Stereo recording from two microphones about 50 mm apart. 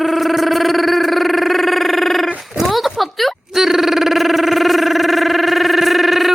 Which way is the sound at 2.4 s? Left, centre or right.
Centre.